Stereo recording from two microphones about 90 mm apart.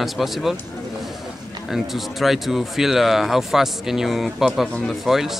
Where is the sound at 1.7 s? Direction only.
Centre (ahead or behind).